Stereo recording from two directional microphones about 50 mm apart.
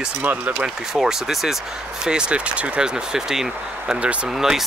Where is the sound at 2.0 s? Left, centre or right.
Centre.